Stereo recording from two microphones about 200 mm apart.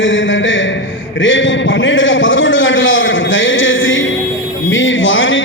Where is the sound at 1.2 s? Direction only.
70° left (ahead or behind).